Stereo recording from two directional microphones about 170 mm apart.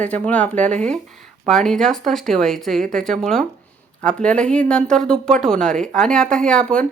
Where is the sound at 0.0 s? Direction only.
10° left (ahead or behind).